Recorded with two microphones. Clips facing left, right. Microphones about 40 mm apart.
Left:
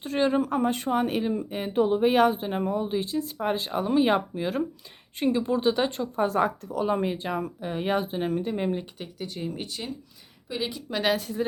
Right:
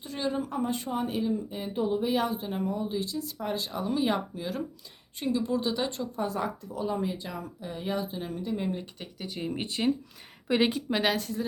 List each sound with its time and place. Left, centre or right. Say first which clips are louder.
0.0 s speech: left 7 dB; left
6.2 s speech: left 9 dB; left
9.0 s speech: left 2 dB; centre
9.5 s speech: right 6 dB; right
10.5 s a woman's voice: right 6 dB; right
11.0 s speech: left 5 dB; centre